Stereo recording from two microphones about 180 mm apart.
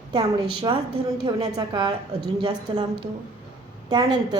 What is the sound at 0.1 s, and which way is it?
A woman's voice, 25° right (ahead or behind).